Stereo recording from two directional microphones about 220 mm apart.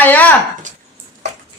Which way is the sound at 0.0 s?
5° left (ahead or behind).